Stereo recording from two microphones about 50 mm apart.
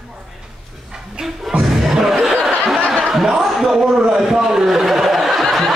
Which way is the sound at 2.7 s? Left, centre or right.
Centre.